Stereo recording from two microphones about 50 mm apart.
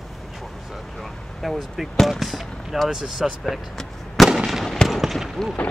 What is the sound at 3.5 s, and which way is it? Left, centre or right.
Fireworks, centre.